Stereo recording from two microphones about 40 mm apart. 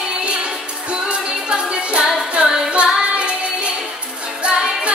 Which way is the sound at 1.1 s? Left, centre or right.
Right.